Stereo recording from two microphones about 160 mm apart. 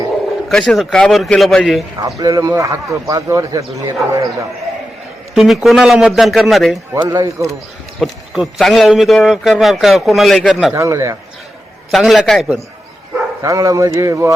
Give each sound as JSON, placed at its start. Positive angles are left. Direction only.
{"t": 0.4, "sound": "a man's voice", "side_deg": 0}
{"t": 2.0, "sound": "speech", "side_deg": -20}
{"t": 5.3, "sound": "a man's voice", "side_deg": 0}
{"t": 6.9, "sound": "speech", "side_deg": -20}
{"t": 7.9, "sound": "a man's voice", "side_deg": 0}
{"t": 10.8, "sound": "speech", "side_deg": -20}
{"t": 11.9, "sound": "a man's voice", "side_deg": 0}
{"t": 13.4, "sound": "speech", "side_deg": -20}